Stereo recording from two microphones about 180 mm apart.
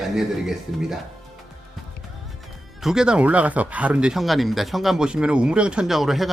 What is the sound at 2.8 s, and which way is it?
Speech, 5° right (ahead or behind).